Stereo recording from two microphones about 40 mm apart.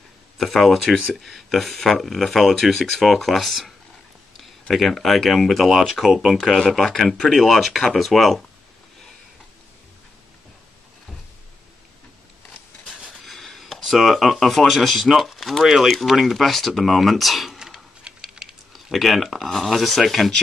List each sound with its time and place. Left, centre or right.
0.4 s speech: centre
5.7 s speech: centre
13.1 s a sound: centre
13.8 s speech: centre
17.5 s a sound: centre
18.0 s typing: centre
18.7 s speech: centre